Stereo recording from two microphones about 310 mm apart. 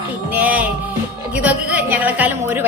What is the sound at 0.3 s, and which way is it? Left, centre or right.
Music, centre.